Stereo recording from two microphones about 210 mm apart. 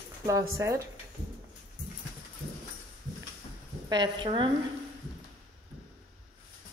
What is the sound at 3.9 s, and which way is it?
Speech, 20° right (ahead or behind).